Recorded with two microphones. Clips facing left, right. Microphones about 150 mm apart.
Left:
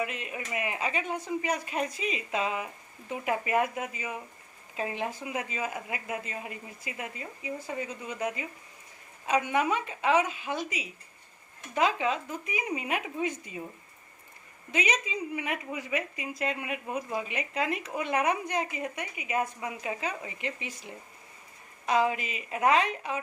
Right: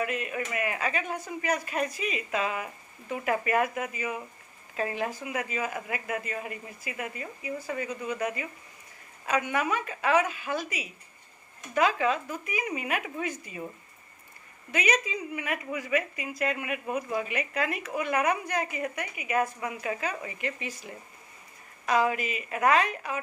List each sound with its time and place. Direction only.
0.0 s a woman's voice: 20° left (ahead or behind)
14.7 s a woman's voice: 25° left (ahead or behind)
21.8 s a woman's voice: 20° left (ahead or behind)